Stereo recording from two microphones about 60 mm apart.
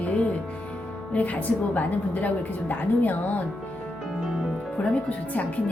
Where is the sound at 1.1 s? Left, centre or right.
Left.